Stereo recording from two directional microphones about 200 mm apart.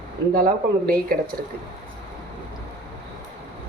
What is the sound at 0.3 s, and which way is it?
Speech, 45° right (ahead or behind).